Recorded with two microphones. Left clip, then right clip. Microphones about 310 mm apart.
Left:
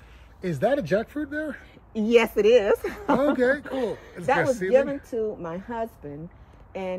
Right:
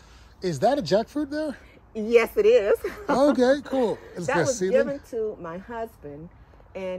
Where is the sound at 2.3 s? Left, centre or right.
Left.